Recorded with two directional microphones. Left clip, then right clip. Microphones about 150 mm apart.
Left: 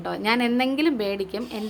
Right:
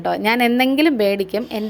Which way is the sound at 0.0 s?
35° right (ahead or behind).